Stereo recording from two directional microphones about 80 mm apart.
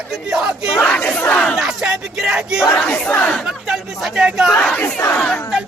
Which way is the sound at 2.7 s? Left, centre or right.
Centre.